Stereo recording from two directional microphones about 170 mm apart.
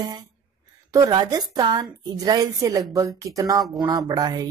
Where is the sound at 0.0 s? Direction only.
20° right (ahead or behind).